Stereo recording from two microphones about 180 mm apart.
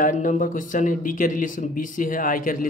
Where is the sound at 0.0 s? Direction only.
45° left (ahead or behind).